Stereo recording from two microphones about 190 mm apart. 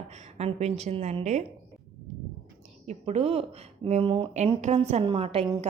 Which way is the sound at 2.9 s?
35° right (ahead or behind).